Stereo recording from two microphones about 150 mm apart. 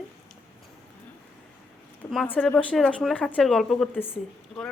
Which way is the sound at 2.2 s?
10° left (ahead or behind).